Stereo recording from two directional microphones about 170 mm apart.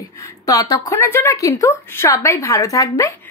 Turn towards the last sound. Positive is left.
turn(degrees=20)  # may be behind; listen again after turning